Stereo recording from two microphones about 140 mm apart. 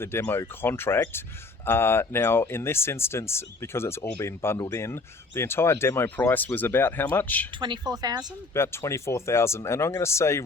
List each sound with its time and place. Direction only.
0.0 s speech: 15° left (ahead or behind)
7.6 s a woman's voice: 30° right (ahead or behind)
8.5 s speech: 20° left (ahead or behind)